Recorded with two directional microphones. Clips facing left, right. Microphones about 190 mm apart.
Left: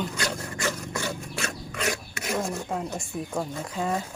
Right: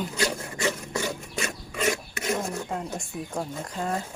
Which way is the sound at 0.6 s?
20° right (ahead or behind).